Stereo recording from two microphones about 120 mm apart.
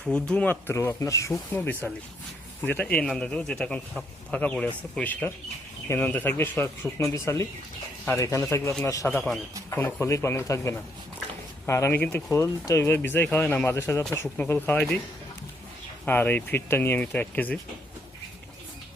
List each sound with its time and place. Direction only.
0.0 s speech: 10° left (ahead or behind); by 9.0 s 30° left (ahead or behind)
9.0 s speech: 10° left (ahead or behind)
9.6 s speech: 20° left (ahead or behind)
14.8 s a man's voice: 5° left (ahead or behind)
16.0 s speech: 15° left (ahead or behind)